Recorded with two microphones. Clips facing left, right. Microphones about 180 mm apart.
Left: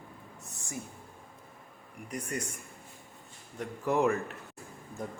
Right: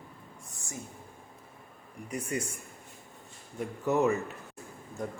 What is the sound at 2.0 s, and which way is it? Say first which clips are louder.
Speech: right 3 dB; 10° right (ahead or behind).